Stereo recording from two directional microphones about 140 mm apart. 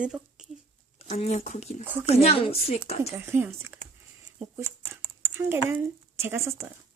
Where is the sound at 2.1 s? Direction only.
45° left (ahead or behind).